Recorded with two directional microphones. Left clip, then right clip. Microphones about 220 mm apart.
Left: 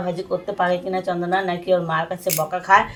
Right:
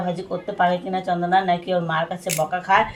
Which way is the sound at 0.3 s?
30° left (ahead or behind).